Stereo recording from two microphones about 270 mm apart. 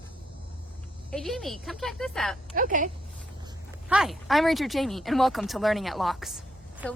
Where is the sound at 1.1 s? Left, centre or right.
Centre.